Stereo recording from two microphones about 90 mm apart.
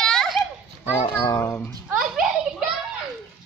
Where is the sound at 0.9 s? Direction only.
25° left (ahead or behind).